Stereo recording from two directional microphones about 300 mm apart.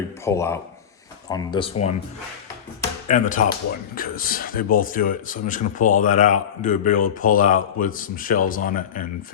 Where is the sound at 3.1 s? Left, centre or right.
Left.